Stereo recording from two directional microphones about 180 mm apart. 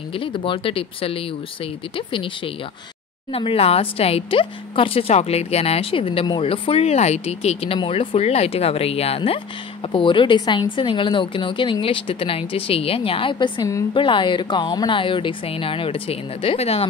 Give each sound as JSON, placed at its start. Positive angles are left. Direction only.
{"t": 0.1, "sound": "a woman's voice", "side_deg": 30}